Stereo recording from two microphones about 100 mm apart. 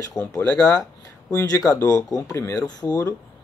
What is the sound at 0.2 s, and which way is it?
Speech, centre (ahead or behind).